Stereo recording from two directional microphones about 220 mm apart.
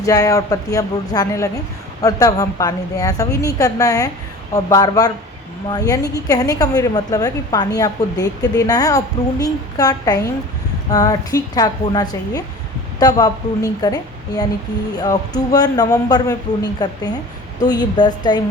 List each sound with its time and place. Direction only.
0.0 s a woman's voice: 15° left (ahead or behind)